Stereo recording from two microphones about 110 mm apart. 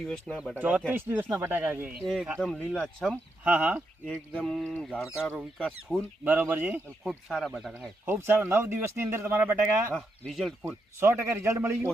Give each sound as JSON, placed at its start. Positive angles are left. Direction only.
{"t": 0.5, "sound": "speech", "side_deg": -15}
{"t": 2.0, "sound": "speech", "side_deg": 0}
{"t": 3.4, "sound": "speech", "side_deg": -15}
{"t": 3.8, "sound": "speech", "side_deg": 5}
{"t": 6.2, "sound": "speech", "side_deg": -20}
{"t": 7.0, "sound": "speech", "side_deg": -5}
{"t": 8.0, "sound": "speech", "side_deg": -20}
{"t": 9.9, "sound": "speech", "side_deg": 0}
{"t": 11.0, "sound": "speech", "side_deg": -25}